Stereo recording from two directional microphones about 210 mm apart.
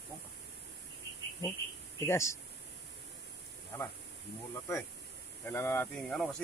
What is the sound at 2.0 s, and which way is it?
Speech, 10° left (ahead or behind).